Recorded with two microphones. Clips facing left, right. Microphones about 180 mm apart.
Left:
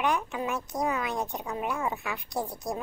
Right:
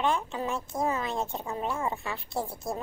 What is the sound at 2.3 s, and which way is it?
Speech, centre (ahead or behind).